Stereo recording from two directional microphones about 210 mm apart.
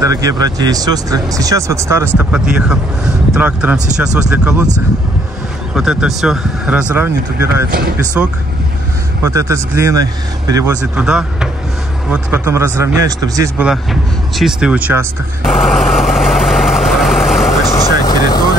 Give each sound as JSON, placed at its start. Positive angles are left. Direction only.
{"t": 0.0, "sound": "speech", "side_deg": -15}
{"t": 5.8, "sound": "speech", "side_deg": 0}
{"t": 11.1, "sound": "speech", "side_deg": -5}
{"t": 14.3, "sound": "vehicle", "side_deg": 0}
{"t": 17.6, "sound": "vehicle", "side_deg": 15}